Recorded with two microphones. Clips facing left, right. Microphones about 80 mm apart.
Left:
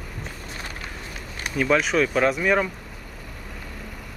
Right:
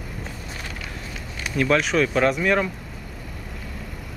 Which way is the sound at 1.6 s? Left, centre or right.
Centre.